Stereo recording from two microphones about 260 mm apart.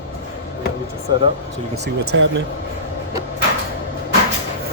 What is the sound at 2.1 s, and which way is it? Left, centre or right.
Speech, right.